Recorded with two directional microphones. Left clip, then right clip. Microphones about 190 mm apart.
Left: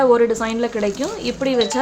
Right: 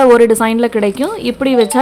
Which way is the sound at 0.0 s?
40° right (ahead or behind).